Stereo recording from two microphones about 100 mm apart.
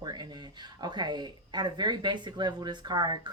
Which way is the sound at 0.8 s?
50° right (ahead or behind).